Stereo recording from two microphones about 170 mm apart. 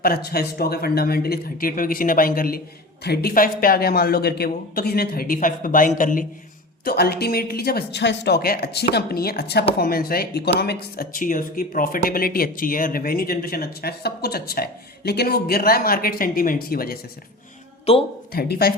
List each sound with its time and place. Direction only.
0.0 s speech: 65° left (ahead or behind)
3.0 s speech: 70° left (ahead or behind); by 6.2 s 50° left (ahead or behind)
6.8 s speech: 65° left (ahead or behind)
17.9 s speech: 35° left (ahead or behind)
18.3 s speech: 65° left (ahead or behind)